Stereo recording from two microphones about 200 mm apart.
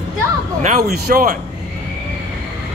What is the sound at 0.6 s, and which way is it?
Speech, 40° right (ahead or behind).